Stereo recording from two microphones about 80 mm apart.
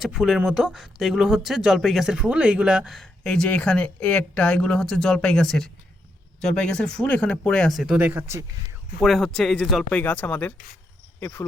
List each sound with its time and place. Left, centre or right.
0.0 s speech: centre
3.2 s speech: centre
7.9 s speech: right
9.0 s speech: centre
9.9 s speech: left